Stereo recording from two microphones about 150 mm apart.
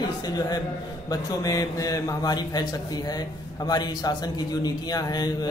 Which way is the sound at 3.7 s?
25° left (ahead or behind).